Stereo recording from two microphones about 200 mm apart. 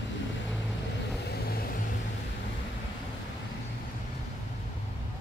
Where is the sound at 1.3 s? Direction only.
50° left (ahead or behind).